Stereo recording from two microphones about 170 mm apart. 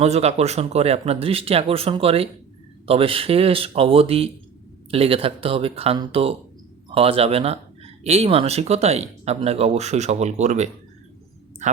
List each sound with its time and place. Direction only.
0.0 s speech: 40° right (ahead or behind)